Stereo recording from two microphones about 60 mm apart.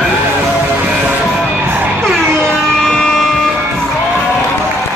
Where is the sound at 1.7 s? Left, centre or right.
Right.